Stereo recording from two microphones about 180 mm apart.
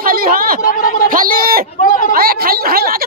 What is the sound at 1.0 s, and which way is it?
Speech, 50° right (ahead or behind).